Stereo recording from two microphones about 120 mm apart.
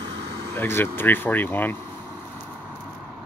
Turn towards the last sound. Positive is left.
turn(degrees=15)  # may be behind; listen again after turning